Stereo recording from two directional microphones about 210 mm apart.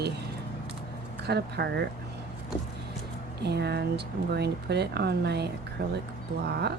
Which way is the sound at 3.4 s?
50° right (ahead or behind).